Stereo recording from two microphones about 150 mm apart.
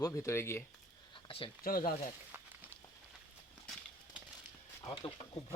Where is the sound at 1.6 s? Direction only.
70° left (ahead or behind).